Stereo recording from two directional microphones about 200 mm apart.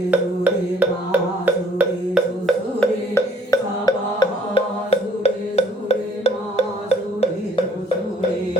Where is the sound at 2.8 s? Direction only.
15° left (ahead or behind); by 6.6 s 30° left (ahead or behind).